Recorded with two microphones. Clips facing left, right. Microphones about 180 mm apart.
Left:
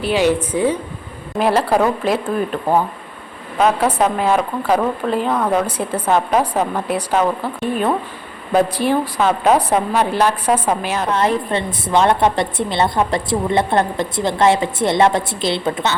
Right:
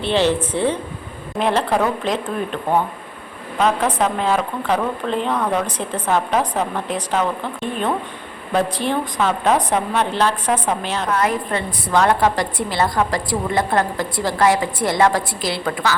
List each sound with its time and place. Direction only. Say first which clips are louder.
0.0 s a woman's voice: left 2 dB; 10° left (ahead or behind)
3.6 s a woman's voice: left 3 dB; 10° left (ahead or behind)
8.5 s a woman's voice: left 4 dB; 10° left (ahead or behind)
11.1 s a woman's voice: left 2 dB; 25° left (ahead or behind)